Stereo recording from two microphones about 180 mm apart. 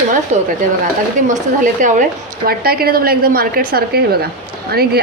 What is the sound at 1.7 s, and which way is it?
Speech, 45° right (ahead or behind).